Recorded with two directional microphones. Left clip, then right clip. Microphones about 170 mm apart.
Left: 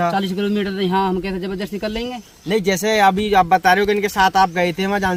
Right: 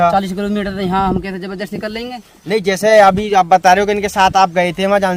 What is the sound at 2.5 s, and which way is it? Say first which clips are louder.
Speech: right 7 dB; 55° right (ahead or behind).